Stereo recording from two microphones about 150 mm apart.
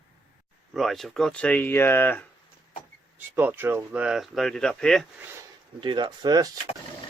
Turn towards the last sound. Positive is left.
turn(degrees=-25)  # may be behind; listen again after turning